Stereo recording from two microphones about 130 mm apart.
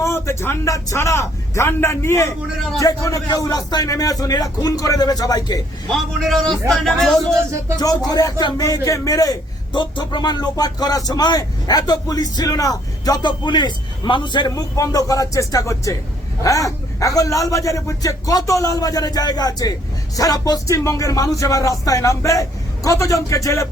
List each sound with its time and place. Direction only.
0.0 s a man's voice: 20° left (ahead or behind)
5.9 s speech: centre (ahead or behind)
7.8 s a man's voice: 30° left (ahead or behind)